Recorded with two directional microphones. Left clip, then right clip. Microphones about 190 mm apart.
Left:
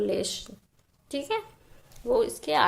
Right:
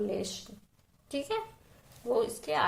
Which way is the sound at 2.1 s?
35° left (ahead or behind).